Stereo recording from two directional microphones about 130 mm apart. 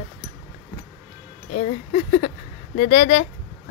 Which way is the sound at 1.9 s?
60° left (ahead or behind).